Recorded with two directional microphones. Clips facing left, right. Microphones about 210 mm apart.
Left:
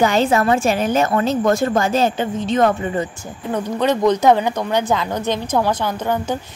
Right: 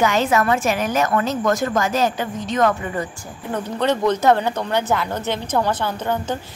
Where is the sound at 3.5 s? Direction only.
10° left (ahead or behind).